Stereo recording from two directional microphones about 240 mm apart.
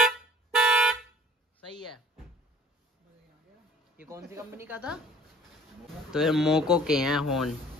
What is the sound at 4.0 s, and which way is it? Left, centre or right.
Speech, centre.